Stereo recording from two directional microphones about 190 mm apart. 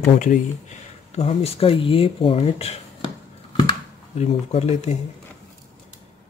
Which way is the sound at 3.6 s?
30° left (ahead or behind).